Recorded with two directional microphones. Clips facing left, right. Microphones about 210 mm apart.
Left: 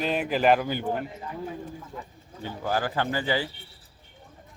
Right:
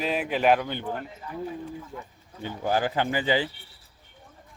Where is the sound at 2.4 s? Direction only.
20° right (ahead or behind).